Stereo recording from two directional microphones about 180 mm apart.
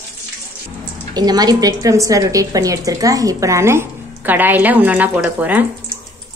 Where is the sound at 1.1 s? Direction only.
20° right (ahead or behind).